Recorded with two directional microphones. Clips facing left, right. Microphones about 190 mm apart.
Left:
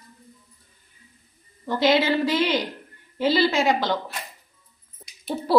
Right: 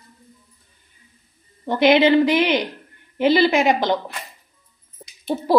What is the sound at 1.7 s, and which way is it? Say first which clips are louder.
A woman's voice: right 6 dB; 20° right (ahead or behind).